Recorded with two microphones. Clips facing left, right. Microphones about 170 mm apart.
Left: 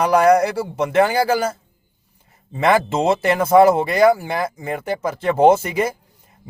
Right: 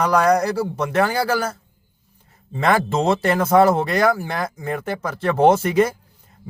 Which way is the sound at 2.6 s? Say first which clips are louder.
Left 2 dB; 10° left (ahead or behind).